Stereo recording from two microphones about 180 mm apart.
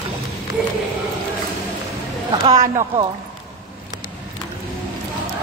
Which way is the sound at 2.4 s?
40° right (ahead or behind).